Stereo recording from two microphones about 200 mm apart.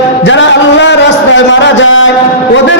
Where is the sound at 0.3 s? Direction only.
65° left (ahead or behind).